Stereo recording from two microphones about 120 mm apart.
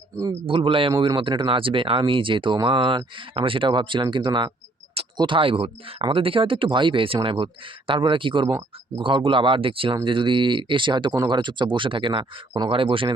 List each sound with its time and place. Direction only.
0.4 s speech: 45° right (ahead or behind)